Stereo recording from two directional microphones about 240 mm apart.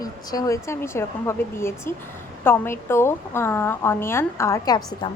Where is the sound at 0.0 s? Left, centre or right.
Centre.